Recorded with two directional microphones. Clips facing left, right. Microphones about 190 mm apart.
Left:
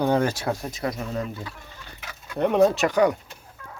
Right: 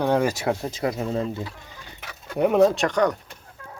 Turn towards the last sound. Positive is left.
turn(degrees=10)  # may be behind; listen again after turning